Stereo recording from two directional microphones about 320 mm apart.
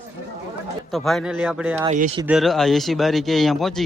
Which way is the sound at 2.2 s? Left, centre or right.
Centre.